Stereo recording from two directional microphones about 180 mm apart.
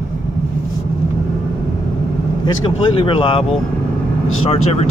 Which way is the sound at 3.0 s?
30° left (ahead or behind).